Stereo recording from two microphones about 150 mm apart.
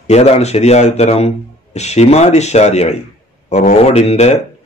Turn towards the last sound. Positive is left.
turn(degrees=45)  # may be behind; listen again after turning